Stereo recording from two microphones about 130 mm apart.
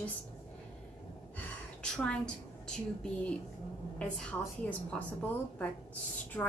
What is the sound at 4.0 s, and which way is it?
A woman's voice, 10° left (ahead or behind).